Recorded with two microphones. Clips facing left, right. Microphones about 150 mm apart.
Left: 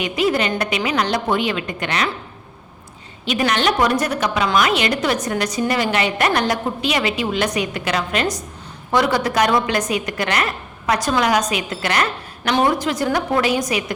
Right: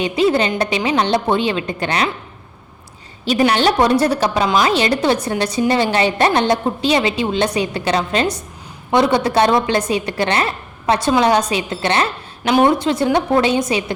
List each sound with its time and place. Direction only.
0.0 s a woman's voice: 30° right (ahead or behind)
3.2 s a woman's voice: 30° right (ahead or behind)